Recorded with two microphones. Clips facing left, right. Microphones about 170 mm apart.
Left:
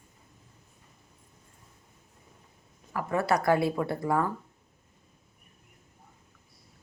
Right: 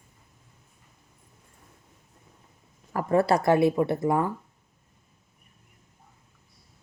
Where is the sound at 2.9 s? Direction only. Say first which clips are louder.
Right 5 dB; 35° right (ahead or behind).